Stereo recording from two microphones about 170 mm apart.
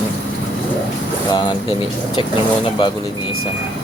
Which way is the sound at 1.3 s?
25° left (ahead or behind).